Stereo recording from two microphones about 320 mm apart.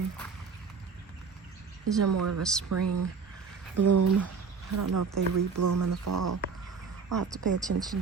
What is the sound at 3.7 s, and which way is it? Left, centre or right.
Speech, right.